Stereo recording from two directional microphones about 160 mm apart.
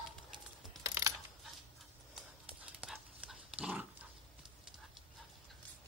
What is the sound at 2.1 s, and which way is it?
Dog, 5° right (ahead or behind).